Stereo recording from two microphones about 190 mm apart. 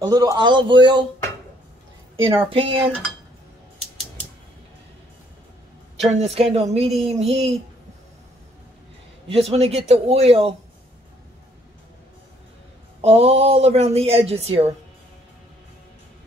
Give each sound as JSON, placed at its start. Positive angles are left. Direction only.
{"t": 0.0, "sound": "a man's voice", "side_deg": -20}
{"t": 2.2, "sound": "a man's voice", "side_deg": -30}
{"t": 6.2, "sound": "speech", "side_deg": -30}
{"t": 9.3, "sound": "speech", "side_deg": -30}
{"t": 13.0, "sound": "speech", "side_deg": -30}